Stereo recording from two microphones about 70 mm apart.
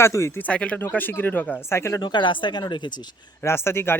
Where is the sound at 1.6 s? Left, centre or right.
Left.